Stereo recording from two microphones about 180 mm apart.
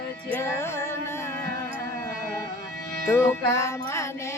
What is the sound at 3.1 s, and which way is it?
Music, 15° left (ahead or behind).